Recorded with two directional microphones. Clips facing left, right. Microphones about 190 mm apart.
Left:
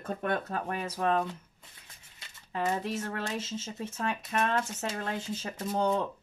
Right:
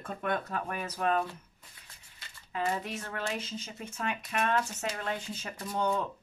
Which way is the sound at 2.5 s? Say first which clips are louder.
Left 2 dB; 30° left (ahead or behind).